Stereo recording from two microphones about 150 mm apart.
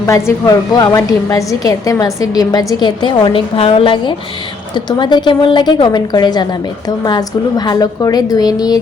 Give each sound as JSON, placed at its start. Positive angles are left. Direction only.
{"t": 0.0, "sound": "a woman's voice", "side_deg": 20}